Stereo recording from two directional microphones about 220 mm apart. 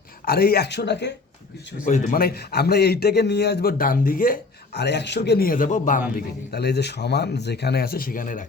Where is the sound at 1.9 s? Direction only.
40° left (ahead or behind).